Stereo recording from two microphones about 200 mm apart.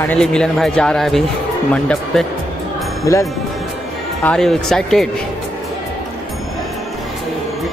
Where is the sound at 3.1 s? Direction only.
15° left (ahead or behind).